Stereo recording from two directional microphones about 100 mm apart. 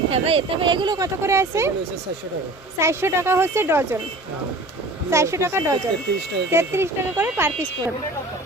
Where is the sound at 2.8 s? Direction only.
25° right (ahead or behind).